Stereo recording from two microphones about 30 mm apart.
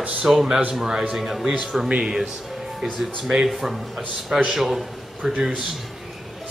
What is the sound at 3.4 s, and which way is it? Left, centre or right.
A man's voice, centre.